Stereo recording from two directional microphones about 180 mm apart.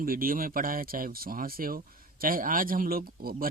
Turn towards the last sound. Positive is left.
turn(degrees=-55)  # may be behind; listen again after turning